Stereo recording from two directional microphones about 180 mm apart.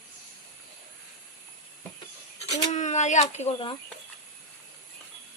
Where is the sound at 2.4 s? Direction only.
40° left (ahead or behind).